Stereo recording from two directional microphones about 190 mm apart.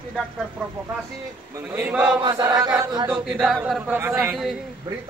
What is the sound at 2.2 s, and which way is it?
Chant, 20° right (ahead or behind).